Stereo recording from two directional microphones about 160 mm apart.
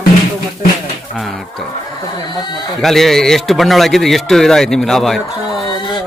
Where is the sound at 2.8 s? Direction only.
Centre (ahead or behind).